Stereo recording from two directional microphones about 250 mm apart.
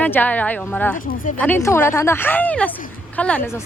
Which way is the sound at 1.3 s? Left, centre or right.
Centre.